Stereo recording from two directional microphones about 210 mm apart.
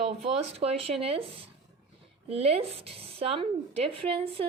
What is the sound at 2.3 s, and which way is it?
Speech, 30° right (ahead or behind).